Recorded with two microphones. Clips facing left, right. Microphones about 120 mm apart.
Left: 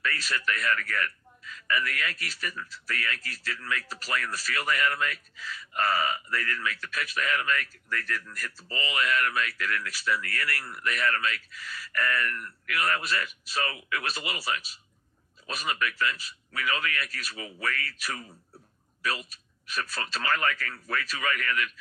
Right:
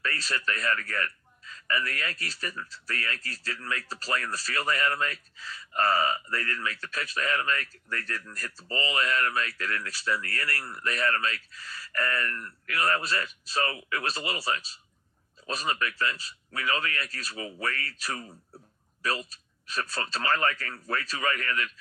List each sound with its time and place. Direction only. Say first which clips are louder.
0.0 s speech: left 1 dB; 30° right (ahead or behind)